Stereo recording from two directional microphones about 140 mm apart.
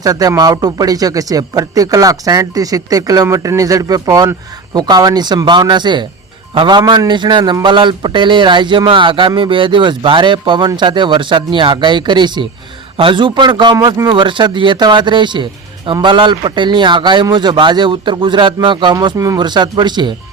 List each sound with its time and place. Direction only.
0.0 s a man's voice: 25° right (ahead or behind)